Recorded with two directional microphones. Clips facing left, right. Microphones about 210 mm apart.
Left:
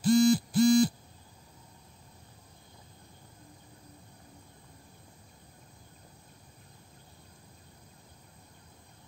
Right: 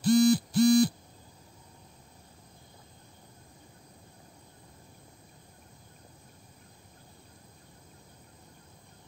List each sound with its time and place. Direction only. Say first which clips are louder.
0.0 s owl: right 1 dB; 65° right (ahead or behind)